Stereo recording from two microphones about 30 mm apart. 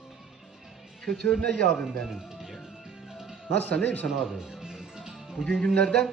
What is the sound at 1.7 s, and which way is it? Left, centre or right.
Music, centre.